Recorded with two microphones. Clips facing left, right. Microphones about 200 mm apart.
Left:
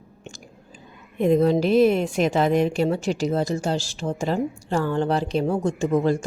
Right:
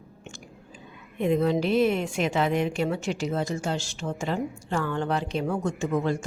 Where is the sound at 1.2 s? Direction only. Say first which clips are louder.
Left 5 dB; 40° left (ahead or behind).